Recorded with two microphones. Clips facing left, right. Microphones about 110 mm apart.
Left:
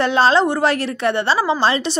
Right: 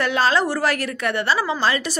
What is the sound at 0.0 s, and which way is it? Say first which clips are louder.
A woman's voice: left 5 dB; 30° left (ahead or behind).